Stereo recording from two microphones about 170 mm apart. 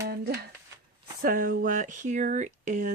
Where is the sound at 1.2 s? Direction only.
55° right (ahead or behind).